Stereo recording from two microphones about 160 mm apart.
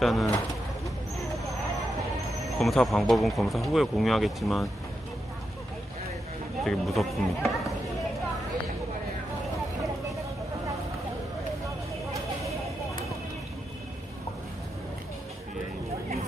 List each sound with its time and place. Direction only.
0.0 s speech: centre (ahead or behind)
2.6 s speech: centre (ahead or behind)
6.6 s speech: centre (ahead or behind)